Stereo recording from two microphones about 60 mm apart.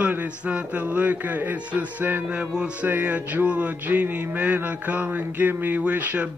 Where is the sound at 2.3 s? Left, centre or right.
Centre.